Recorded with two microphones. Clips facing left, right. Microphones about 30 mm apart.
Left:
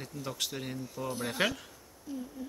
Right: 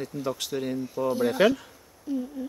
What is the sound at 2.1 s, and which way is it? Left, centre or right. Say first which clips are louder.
Speech: right 10 dB; centre.